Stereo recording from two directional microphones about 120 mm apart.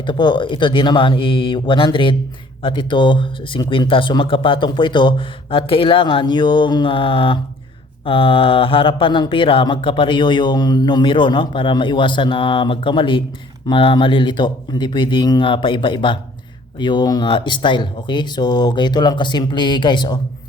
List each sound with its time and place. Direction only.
0.0 s speech: 40° left (ahead or behind)